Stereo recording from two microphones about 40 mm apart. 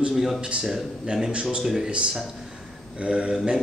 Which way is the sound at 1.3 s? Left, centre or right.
Right.